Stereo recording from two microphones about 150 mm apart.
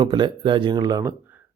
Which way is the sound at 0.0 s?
30° right (ahead or behind).